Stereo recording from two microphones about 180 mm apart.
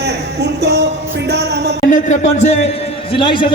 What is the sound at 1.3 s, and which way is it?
Music, 70° right (ahead or behind).